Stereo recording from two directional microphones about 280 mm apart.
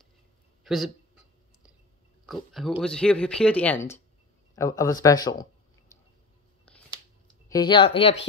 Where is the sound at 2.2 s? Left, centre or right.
Centre.